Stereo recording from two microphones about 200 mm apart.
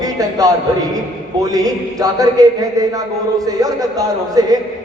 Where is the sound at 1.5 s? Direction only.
15° right (ahead or behind).